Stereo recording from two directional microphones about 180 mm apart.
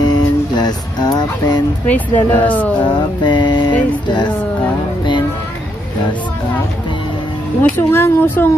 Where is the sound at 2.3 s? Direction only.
10° left (ahead or behind).